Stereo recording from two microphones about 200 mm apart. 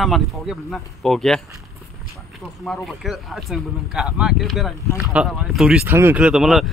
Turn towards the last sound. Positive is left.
turn(degrees=0)  # may be behind; listen again after turning